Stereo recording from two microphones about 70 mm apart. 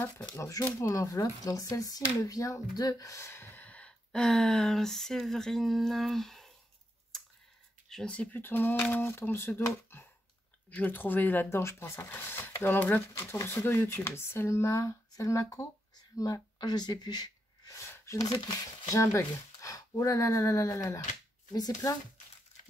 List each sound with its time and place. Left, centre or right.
0.0 s speech: left
0.5 s speech: left
3.3 s gasp: left
3.6 s speech: centre
7.1 s computer keyboard: centre
7.9 s speech: centre; by 9.6 s left
10.7 s speech: left
11.5 s speech: left
16.5 s a sound: left
17.7 s a sound: left
18.1 s speech: left
21.5 s speech: left